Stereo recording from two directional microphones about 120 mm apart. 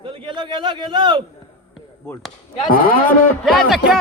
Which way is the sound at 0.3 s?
45° right (ahead or behind).